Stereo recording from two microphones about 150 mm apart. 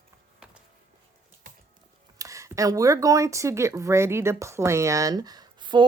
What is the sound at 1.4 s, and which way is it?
Music, 60° right (ahead or behind).